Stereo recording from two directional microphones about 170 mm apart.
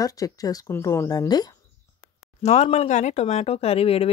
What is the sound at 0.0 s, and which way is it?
A woman's voice, 20° left (ahead or behind).